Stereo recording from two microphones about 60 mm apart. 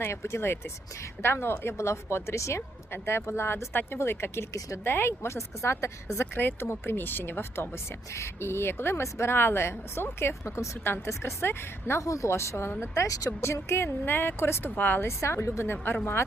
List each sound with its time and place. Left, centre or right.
0.0 s speech: left
2.6 s speech: left
6.1 s speech: left
8.1 s speech: left
12.0 s speech: left
13.5 s speech: left
15.0 s speech: left